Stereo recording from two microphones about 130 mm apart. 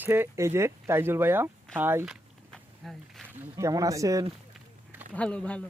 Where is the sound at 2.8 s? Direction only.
Centre (ahead or behind).